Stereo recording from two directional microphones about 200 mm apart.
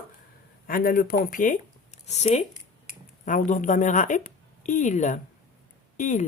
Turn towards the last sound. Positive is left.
turn(degrees=40)  # may be behind; listen again after turning